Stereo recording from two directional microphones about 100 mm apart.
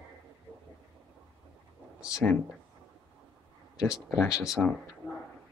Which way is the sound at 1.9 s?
10° right (ahead or behind).